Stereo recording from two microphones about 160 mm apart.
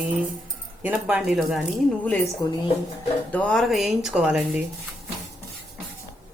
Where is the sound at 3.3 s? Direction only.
5° left (ahead or behind).